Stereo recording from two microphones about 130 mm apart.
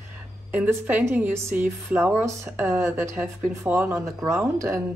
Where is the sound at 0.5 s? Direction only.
10° right (ahead or behind).